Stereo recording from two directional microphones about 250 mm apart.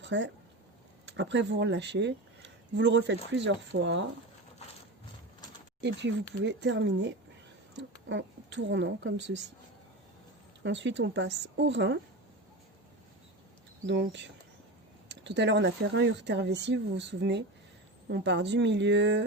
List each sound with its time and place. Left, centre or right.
0.0 s speech: right
5.8 s speech: right
8.1 s speech: right
10.6 s speech: right
13.8 s speech: right